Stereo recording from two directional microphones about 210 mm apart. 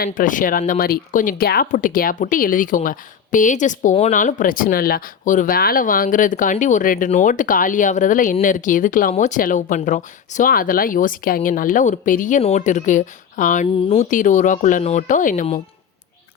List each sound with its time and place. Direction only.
0.0 s speech: 40° left (ahead or behind)